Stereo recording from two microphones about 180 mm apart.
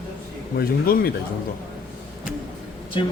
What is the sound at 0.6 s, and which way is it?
Speech, 55° left (ahead or behind).